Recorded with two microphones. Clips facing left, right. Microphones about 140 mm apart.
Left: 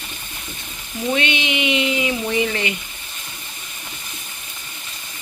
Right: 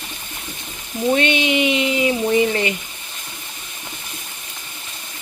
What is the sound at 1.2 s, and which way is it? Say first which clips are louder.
Speech: right 4 dB; 45° right (ahead or behind).